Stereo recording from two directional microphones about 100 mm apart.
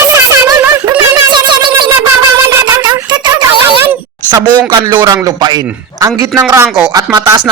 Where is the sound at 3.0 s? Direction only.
50° right (ahead or behind).